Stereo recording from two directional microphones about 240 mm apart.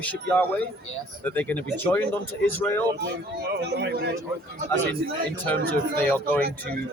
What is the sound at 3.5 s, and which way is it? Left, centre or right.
A man's voice, right.